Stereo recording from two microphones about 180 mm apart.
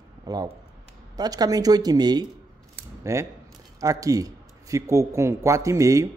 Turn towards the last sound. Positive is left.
turn(degrees=-15)  # may be behind; listen again after turning